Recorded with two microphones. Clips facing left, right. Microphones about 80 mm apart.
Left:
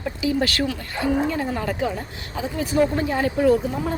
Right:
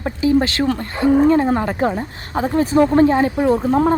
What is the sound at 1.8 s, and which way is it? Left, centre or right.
Speech, right.